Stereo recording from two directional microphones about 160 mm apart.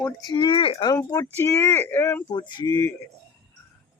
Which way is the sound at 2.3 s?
25° left (ahead or behind).